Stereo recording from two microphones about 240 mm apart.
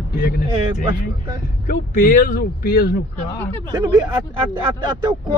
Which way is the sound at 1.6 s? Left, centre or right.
Left.